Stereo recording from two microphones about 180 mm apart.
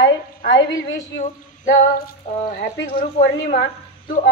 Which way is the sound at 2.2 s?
40° left (ahead or behind).